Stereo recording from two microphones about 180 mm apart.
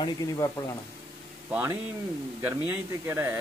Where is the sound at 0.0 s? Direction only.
20° left (ahead or behind).